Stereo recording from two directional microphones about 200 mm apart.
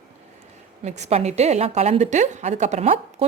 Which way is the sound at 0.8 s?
35° right (ahead or behind).